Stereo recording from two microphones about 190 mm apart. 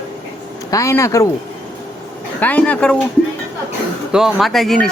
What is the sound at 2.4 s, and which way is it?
Speech, 10° left (ahead or behind).